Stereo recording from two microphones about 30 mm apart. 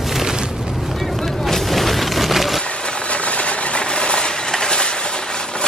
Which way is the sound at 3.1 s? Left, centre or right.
Left.